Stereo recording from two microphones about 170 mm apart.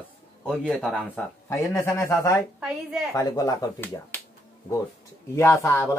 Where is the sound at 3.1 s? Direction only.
20° left (ahead or behind).